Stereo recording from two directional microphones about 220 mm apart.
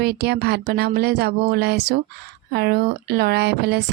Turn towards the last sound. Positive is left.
turn(degrees=-50)  # may be behind; listen again after turning